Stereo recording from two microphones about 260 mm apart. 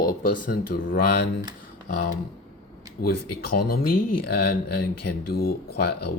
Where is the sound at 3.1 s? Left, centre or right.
Left.